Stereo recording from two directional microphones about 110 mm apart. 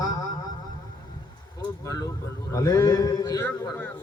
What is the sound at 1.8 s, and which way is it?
Vehicle, 35° left (ahead or behind).